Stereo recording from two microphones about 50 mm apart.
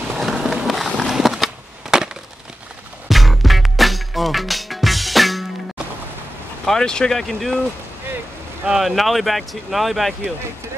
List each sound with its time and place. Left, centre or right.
0.1 s skateboard: centre
0.4 s skateboard: centre
0.7 s run: centre
1.0 s a sound: centre
3.1 s music: centre
6.6 s speech: centre
8.6 s speech: centre